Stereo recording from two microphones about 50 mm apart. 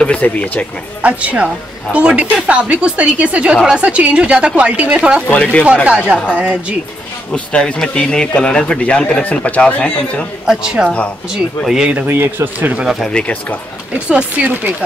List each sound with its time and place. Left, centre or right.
0.0 s speech: left
1.0 s speech: right
5.3 s speech: left
5.9 s speech: right
7.3 s speech: left
10.4 s speech: centre
12.1 s speech: right
12.5 s speech: right
13.2 s speech: centre
13.9 s speech: right